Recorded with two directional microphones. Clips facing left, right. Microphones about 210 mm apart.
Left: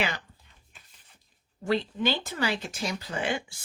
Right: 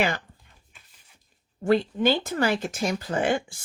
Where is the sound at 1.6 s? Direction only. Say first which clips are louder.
Right 6 dB; 50° right (ahead or behind).